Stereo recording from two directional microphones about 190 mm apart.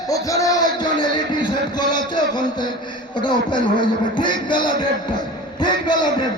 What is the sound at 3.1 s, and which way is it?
A man's voice, 25° left (ahead or behind).